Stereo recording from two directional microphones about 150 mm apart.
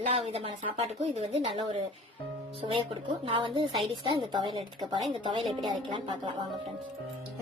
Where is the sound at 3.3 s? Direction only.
35° right (ahead or behind).